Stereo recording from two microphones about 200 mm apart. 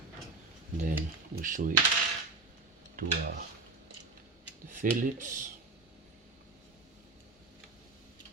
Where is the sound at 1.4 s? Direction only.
40° right (ahead or behind).